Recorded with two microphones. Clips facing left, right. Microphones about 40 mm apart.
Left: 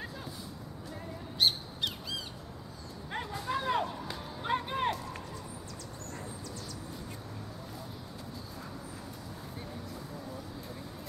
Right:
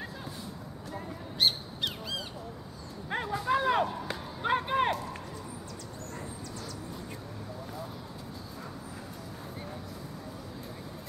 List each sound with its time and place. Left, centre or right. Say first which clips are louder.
0.9 s squawk: right 1 dB; centre
3.1 s dog: right 5 dB; centre
3.3 s a sound: right 5 dB; centre